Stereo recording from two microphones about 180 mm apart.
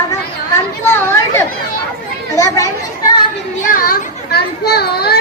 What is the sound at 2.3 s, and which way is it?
Children playing, 15° left (ahead or behind).